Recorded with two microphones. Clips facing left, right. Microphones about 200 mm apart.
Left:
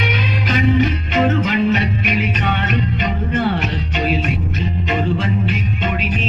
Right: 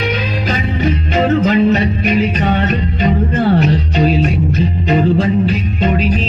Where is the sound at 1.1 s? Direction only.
40° right (ahead or behind).